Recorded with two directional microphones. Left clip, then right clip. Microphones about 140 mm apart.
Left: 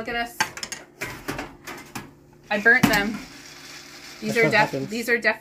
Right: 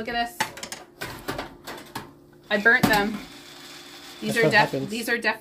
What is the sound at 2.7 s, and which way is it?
Speech, 50° right (ahead or behind).